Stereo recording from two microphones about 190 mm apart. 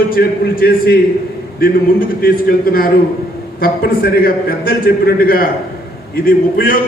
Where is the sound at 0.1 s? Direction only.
55° left (ahead or behind).